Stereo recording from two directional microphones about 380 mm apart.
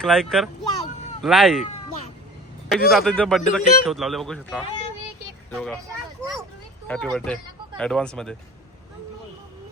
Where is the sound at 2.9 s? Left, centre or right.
Centre.